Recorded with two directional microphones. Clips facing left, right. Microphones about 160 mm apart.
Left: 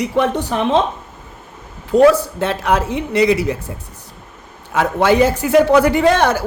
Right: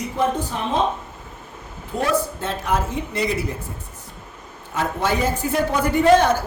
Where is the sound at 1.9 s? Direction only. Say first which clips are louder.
Left 11 dB; 80° left.